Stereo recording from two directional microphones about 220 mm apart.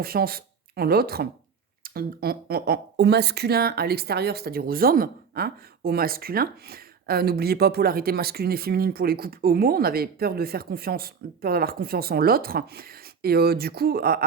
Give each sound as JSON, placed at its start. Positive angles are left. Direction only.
{"t": 0.0, "sound": "speech", "side_deg": -45}